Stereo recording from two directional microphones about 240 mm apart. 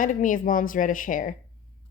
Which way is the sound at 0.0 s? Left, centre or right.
Left.